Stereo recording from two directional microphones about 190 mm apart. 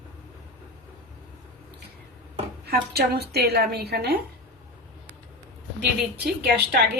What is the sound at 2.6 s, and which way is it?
A woman's voice, 55° right (ahead or behind).